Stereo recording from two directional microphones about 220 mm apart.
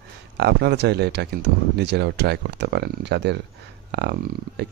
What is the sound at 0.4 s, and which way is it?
Speech, 50° right (ahead or behind).